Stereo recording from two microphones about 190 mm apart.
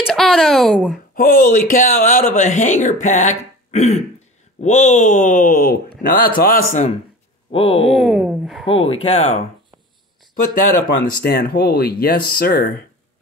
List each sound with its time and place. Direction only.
0.0 s speech: centre (ahead or behind)
1.1 s speech: 45° left (ahead or behind)
7.5 s speech: 30° left (ahead or behind)
7.8 s speech: centre (ahead or behind)
8.6 s speech: 30° left (ahead or behind)
11.2 s speech: 55° left (ahead or behind)